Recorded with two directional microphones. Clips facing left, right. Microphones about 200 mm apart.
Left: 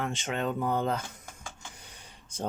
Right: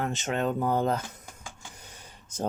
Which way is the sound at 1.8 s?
45° right (ahead or behind).